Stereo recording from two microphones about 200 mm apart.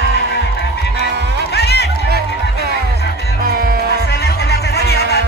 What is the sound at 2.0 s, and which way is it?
Music, 50° right (ahead or behind).